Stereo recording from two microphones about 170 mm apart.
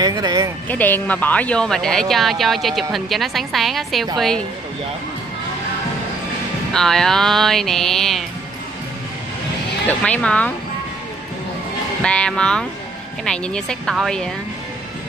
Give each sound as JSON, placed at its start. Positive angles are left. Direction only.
{"t": 0.0, "sound": "speech", "side_deg": -25}
{"t": 0.7, "sound": "speech", "side_deg": 10}
{"t": 6.7, "sound": "speech", "side_deg": 5}
{"t": 9.8, "sound": "speech", "side_deg": 5}
{"t": 12.0, "sound": "speech", "side_deg": 5}